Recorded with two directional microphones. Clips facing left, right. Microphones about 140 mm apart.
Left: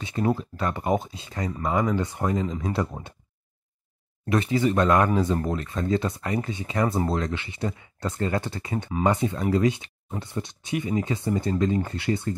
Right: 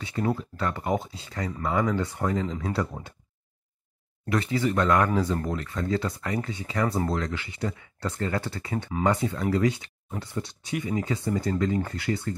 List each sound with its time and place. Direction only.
0.0 s speech: 20° left (ahead or behind)
4.3 s speech: 20° left (ahead or behind)